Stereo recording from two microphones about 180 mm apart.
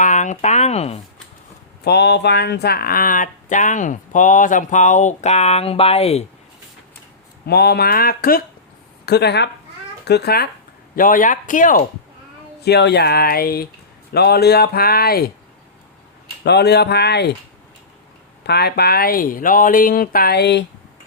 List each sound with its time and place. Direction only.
0.0 s speech: 45° left (ahead or behind)
1.8 s speech: 65° left (ahead or behind); by 6.2 s 35° left (ahead or behind)
7.4 s speech: 60° left (ahead or behind)
10.9 s speech: 50° left (ahead or behind)
12.6 s speech: 65° left (ahead or behind)
16.4 s speech: 65° left (ahead or behind)
18.4 s speech: 65° left (ahead or behind)